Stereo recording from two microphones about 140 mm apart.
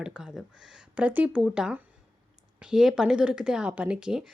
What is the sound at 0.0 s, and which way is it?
Speech, 5° right (ahead or behind).